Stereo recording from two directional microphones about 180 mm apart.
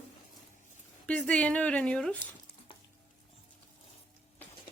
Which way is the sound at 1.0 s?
5° left (ahead or behind).